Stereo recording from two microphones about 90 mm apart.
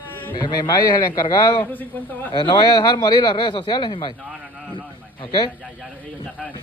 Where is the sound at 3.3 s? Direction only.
70° left (ahead or behind).